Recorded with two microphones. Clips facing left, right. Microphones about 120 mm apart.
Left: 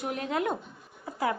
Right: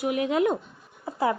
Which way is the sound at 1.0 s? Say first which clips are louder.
Right 4 dB; 25° right (ahead or behind).